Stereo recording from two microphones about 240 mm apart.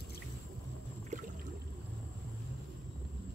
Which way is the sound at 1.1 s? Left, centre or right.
Right.